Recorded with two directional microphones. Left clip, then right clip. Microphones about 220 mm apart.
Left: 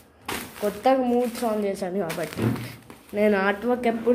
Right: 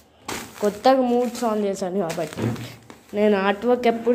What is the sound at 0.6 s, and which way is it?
A woman's voice, 25° right (ahead or behind).